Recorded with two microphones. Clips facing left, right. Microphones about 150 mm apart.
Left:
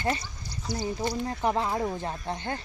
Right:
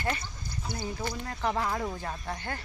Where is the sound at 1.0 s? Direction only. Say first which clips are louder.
Left 4 dB; 20° left (ahead or behind).